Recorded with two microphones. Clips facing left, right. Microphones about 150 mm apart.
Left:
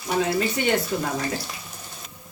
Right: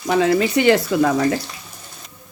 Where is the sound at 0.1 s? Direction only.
90° right.